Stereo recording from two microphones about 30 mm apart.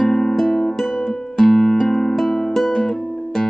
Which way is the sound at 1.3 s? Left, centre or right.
Centre.